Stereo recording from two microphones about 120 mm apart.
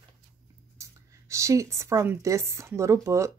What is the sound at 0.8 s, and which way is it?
Speech, 25° right (ahead or behind).